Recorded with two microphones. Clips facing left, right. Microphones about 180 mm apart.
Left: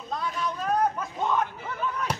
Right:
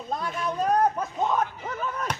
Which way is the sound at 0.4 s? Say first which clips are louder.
Right 3 dB; 40° right (ahead or behind).